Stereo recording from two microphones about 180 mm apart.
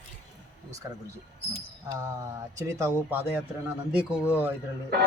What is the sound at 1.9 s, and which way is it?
Speech, 15° right (ahead or behind).